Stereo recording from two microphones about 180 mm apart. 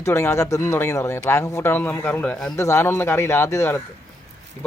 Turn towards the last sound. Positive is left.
turn(degrees=15)  # may be behind; listen again after turning